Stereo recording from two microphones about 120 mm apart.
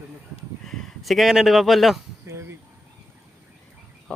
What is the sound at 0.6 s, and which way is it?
Speech, centre (ahead or behind).